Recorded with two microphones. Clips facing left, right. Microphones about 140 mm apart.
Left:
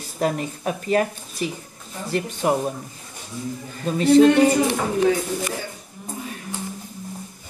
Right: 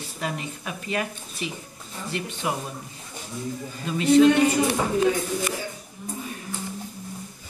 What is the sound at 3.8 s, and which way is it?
Speech, 35° left (ahead or behind).